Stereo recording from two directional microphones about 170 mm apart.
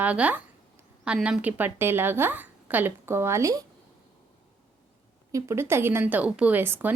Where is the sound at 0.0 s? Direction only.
10° right (ahead or behind).